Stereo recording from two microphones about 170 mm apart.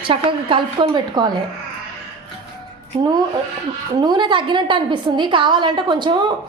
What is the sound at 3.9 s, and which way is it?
A woman's voice, 25° right (ahead or behind).